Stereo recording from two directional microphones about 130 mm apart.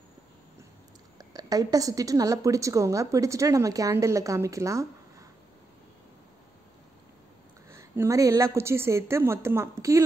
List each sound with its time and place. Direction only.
1.1 s a woman's voice: 30° right (ahead or behind)
7.7 s a woman's voice: 20° right (ahead or behind)